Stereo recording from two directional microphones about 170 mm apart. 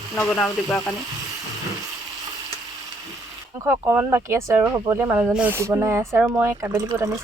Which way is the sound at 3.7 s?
15° right (ahead or behind).